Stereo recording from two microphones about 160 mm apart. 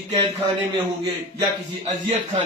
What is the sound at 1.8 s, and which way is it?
Speech, 35° right (ahead or behind).